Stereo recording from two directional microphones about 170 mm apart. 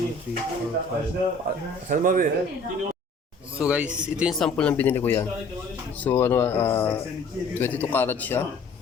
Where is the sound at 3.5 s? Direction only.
5° right (ahead or behind).